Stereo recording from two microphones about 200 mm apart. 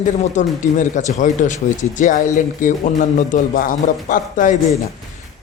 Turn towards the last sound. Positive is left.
turn(degrees=40)  # may be behind; listen again after turning